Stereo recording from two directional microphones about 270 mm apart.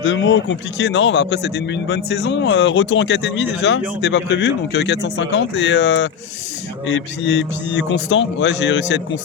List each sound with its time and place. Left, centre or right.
0.0 s a man's voice: left